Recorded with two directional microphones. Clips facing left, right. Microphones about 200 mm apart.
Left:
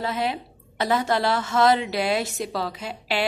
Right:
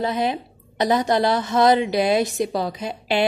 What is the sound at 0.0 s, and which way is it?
A woman's voice, 20° right (ahead or behind).